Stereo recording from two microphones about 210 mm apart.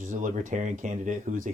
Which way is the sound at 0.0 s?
35° right (ahead or behind).